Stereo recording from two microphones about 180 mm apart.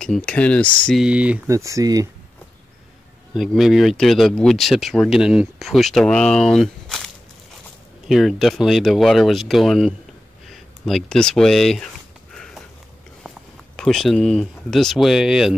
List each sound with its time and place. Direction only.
0.0 s speech: 5° left (ahead or behind)
1.5 s speech: 15° right (ahead or behind)
3.3 s speech: centre (ahead or behind)
8.1 s speech: centre (ahead or behind)
12.4 s sniff: 5° left (ahead or behind)
13.7 s speech: centre (ahead or behind)